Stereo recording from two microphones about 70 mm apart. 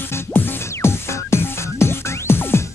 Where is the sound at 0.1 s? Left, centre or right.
Left.